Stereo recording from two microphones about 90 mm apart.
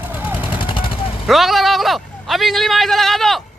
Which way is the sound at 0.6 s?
70° left (ahead or behind).